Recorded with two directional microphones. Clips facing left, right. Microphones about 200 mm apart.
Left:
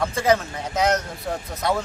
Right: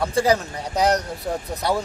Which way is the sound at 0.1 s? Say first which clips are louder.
Right 1 dB; 35° right (ahead or behind).